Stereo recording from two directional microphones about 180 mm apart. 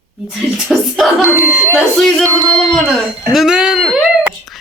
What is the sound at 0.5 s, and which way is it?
Speech, centre (ahead or behind).